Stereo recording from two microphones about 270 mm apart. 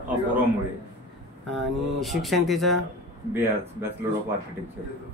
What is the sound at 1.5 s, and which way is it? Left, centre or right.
Speech, centre.